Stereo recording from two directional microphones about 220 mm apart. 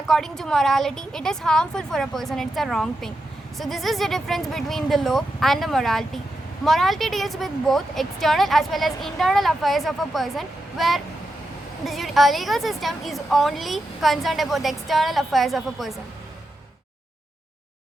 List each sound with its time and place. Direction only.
0.1 s a woman's voice: centre (ahead or behind)